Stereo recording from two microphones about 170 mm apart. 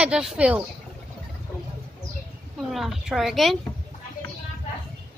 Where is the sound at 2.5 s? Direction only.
Centre (ahead or behind).